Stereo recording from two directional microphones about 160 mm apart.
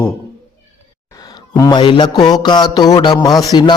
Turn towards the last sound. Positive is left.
turn(degrees=25)  # may be behind; listen again after turning